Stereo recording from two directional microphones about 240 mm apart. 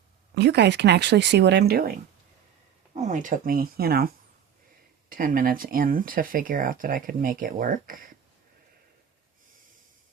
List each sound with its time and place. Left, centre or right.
0.3 s speech: right
3.0 s speech: right